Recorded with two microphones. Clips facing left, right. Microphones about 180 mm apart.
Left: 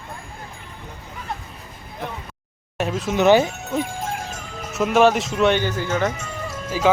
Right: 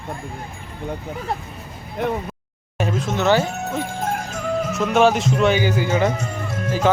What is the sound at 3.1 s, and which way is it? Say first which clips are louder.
Speech: left 4 dB; 15° left (ahead or behind).